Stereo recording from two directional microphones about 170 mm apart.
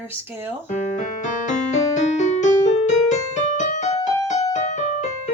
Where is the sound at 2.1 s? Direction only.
45° left (ahead or behind).